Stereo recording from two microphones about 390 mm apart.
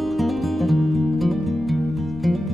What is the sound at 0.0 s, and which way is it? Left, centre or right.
Music, centre.